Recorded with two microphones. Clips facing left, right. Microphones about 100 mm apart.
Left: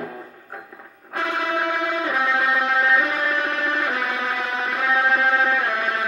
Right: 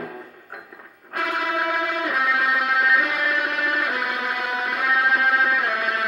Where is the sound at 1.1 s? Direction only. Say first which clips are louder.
Left 1 dB; 30° left (ahead or behind).